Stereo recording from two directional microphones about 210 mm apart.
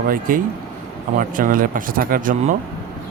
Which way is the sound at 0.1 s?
40° right (ahead or behind).